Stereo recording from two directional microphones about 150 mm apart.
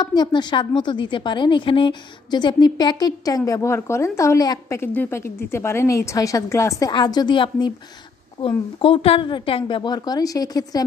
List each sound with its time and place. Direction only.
0.0 s a woman's voice: 30° left (ahead or behind)